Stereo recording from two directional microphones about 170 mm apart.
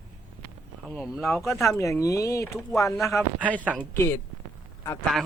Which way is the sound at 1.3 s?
15° left (ahead or behind).